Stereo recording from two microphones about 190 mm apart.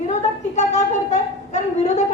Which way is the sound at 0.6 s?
35° left (ahead or behind).